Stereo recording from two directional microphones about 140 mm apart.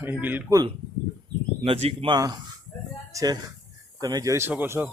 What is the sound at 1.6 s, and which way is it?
Speech, 45° right (ahead or behind).